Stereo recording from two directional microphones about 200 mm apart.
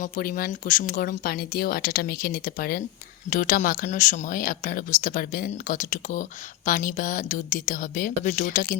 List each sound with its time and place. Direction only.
0.0 s speech: 45° left (ahead or behind)